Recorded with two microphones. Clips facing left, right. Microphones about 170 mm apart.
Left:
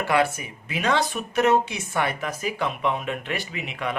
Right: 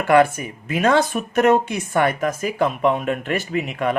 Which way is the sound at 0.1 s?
50° right (ahead or behind).